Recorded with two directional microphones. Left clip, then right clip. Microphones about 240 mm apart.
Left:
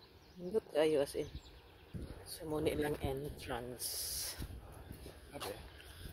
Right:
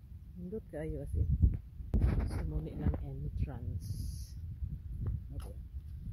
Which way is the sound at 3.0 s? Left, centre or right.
Centre.